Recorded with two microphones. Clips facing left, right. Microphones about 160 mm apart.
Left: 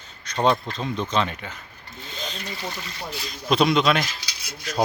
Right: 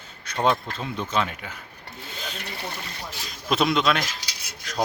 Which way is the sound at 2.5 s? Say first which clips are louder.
Left 1 dB; 55° right (ahead or behind).